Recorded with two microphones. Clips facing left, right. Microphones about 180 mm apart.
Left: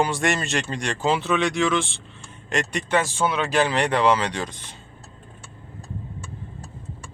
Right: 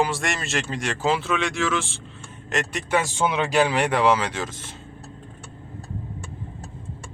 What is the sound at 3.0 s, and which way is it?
Speech, 15° right (ahead or behind).